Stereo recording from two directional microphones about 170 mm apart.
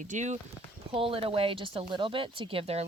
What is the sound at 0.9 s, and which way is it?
Speech, 35° right (ahead or behind).